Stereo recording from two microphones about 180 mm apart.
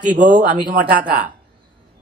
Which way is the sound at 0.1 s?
60° right (ahead or behind).